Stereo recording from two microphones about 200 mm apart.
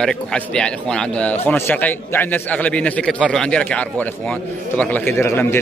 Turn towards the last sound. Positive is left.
turn(degrees=10)  # may be behind; listen again after turning